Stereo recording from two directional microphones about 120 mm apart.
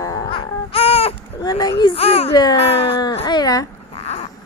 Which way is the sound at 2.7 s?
50° left (ahead or behind).